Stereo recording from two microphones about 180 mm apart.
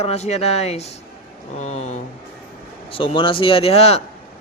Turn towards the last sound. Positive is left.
turn(degrees=35)  # may be behind; listen again after turning